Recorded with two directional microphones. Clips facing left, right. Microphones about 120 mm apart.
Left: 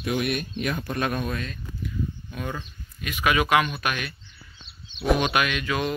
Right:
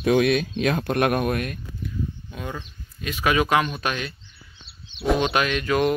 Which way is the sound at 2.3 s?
20° right (ahead or behind).